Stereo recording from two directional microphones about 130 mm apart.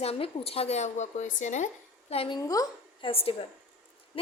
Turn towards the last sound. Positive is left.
turn(degrees=45)  # may be behind; listen again after turning